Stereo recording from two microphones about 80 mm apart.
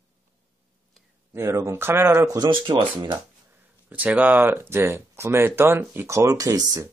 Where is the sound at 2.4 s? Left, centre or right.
Right.